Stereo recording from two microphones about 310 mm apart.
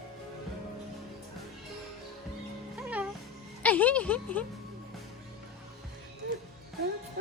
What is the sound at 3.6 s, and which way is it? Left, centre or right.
Speech, centre.